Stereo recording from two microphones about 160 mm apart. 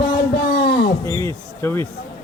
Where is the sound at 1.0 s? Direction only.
15° left (ahead or behind).